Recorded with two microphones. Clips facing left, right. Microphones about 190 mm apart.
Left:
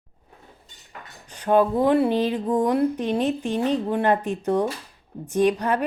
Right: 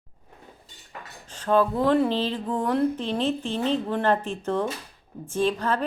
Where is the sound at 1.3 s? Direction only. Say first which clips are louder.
Left 3 dB; 15° left (ahead or behind).